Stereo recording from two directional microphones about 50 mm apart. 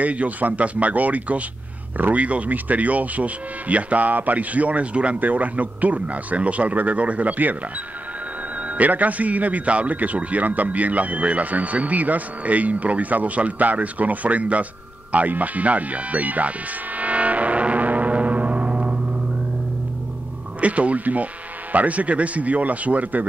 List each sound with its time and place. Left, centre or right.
0.0 s speech: right
8.5 s a man's voice: right
20.6 s speech: right